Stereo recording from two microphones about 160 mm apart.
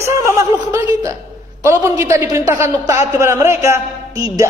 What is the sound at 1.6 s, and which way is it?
A man's voice, 20° right (ahead or behind).